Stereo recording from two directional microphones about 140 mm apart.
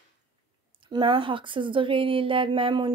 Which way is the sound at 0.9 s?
35° right (ahead or behind).